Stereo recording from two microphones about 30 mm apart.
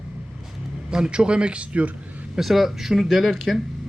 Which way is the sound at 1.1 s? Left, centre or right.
Right.